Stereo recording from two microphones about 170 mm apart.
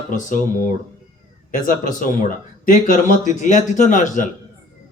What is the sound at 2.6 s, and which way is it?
A man's voice, 50° left (ahead or behind).